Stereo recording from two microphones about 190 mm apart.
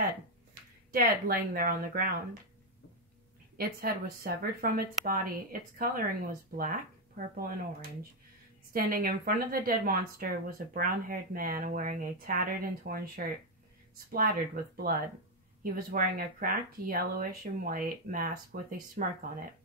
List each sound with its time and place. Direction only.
0.9 s speech: 50° right (ahead or behind)
3.5 s speech: 50° right (ahead or behind)
8.7 s speech: 50° right (ahead or behind)